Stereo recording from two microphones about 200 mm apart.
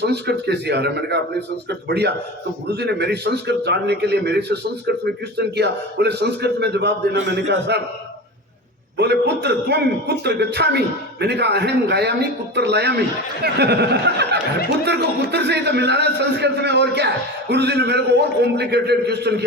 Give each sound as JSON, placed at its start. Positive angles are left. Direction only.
{"t": 0.0, "sound": "a man's voice", "side_deg": -55}
{"t": 9.0, "sound": "a man's voice", "side_deg": -55}